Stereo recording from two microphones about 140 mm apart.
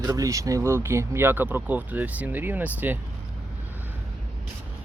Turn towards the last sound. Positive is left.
turn(degrees=-15)  # may be behind; listen again after turning